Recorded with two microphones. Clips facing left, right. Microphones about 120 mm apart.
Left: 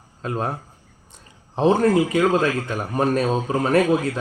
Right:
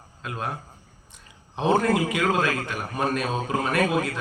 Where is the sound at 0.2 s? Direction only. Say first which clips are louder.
Left 6 dB; 35° left (ahead or behind).